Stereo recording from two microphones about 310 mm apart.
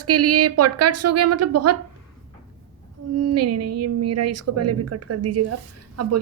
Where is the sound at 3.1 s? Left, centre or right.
Right.